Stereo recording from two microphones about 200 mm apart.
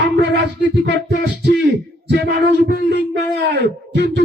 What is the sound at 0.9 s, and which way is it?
Music, 55° right (ahead or behind).